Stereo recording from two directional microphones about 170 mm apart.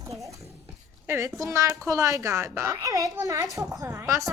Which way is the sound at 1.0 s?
15° right (ahead or behind).